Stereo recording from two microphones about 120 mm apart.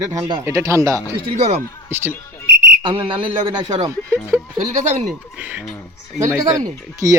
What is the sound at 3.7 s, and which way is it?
Speech, 30° right (ahead or behind).